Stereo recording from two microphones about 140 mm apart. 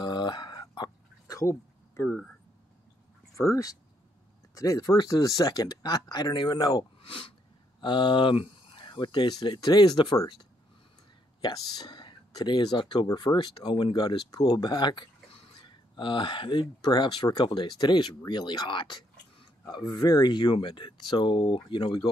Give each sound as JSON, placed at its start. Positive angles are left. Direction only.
{"t": 0.0, "sound": "music", "side_deg": 30}
{"t": 2.0, "sound": "speech", "side_deg": 0}
{"t": 3.3, "sound": "speech", "side_deg": 20}
{"t": 11.4, "sound": "speech", "side_deg": 30}